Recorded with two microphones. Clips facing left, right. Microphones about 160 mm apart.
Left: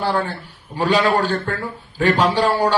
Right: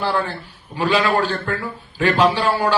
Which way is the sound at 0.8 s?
40° left (ahead or behind).